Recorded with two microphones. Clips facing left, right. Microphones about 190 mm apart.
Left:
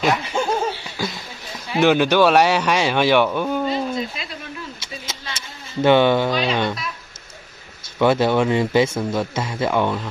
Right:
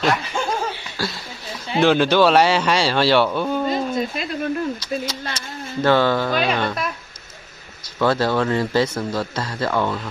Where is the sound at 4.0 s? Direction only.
50° right (ahead or behind).